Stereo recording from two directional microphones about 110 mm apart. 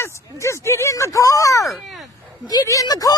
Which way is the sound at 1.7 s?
Centre (ahead or behind).